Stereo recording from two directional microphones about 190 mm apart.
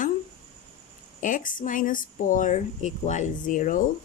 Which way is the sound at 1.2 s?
45° left (ahead or behind).